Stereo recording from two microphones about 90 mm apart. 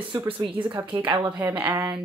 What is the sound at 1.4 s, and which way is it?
Speech, 20° right (ahead or behind).